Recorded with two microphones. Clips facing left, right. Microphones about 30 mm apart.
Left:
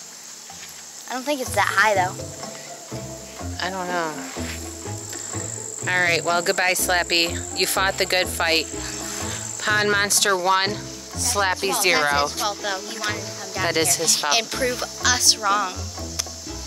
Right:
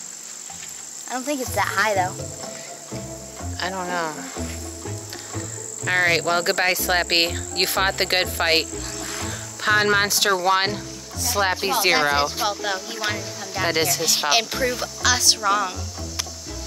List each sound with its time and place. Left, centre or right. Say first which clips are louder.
1.1 s speech: right 1 dB; centre
1.5 s speech: left 3 dB; left
3.5 s speech: even; centre
5.9 s speech: right 1 dB; centre